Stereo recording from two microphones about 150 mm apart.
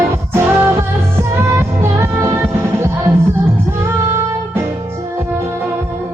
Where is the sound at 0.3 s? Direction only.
15° right (ahead or behind).